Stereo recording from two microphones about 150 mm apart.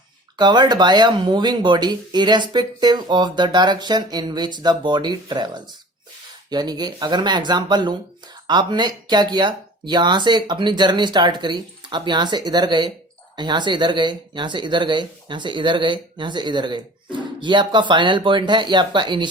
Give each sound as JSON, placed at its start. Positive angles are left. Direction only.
{"t": 0.3, "sound": "speech", "side_deg": -30}